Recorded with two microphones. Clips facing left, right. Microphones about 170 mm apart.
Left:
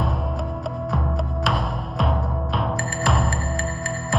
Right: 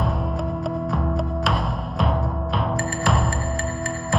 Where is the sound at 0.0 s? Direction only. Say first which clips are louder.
Right 1 dB; centre (ahead or behind).